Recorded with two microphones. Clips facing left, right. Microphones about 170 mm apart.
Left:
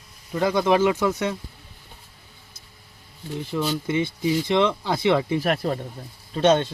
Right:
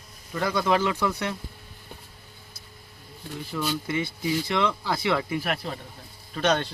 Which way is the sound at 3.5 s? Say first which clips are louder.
Left 4 dB; 20° left (ahead or behind).